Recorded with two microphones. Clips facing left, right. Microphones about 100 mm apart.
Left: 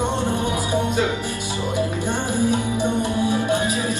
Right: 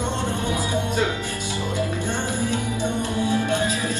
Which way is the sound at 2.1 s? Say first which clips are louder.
Left 4 dB; 15° left (ahead or behind).